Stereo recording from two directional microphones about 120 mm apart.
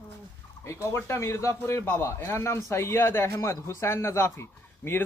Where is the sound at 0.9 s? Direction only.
25° left (ahead or behind).